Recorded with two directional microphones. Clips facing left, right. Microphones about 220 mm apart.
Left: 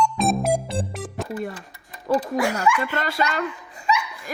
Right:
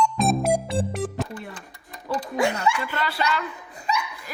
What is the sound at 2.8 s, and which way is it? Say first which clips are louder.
Speech: left 2 dB; 45° left (ahead or behind).